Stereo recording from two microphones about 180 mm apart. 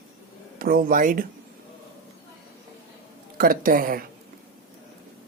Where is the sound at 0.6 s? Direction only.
55° right (ahead or behind).